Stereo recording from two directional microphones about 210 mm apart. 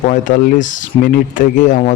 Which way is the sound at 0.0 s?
35° left (ahead or behind).